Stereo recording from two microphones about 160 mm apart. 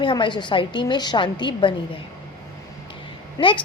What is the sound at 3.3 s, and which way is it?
Speech, 30° left (ahead or behind).